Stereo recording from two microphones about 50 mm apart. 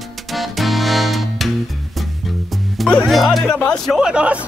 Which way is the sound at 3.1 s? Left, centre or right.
Centre.